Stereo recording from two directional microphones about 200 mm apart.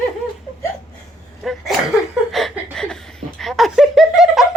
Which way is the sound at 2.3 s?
Centre (ahead or behind).